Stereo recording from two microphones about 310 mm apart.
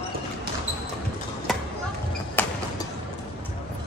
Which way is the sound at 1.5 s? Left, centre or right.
Centre.